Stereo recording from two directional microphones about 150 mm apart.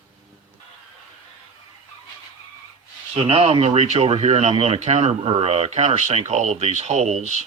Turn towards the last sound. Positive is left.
turn(degrees=-50)  # may be behind; listen again after turning